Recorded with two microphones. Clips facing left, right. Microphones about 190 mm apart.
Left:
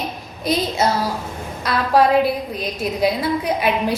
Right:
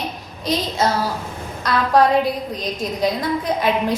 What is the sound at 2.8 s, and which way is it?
Speech, 10° left (ahead or behind).